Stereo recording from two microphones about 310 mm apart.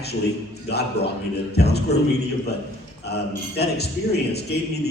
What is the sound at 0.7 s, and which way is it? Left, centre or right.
A man's voice, left.